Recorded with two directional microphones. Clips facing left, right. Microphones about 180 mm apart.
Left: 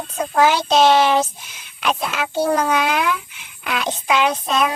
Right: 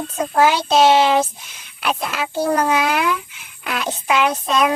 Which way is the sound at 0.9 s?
20° right (ahead or behind).